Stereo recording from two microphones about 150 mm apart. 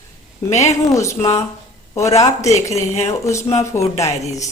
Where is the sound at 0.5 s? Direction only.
50° left (ahead or behind).